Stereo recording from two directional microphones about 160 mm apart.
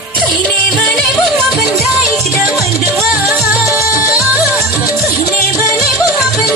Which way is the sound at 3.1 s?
Centre (ahead or behind).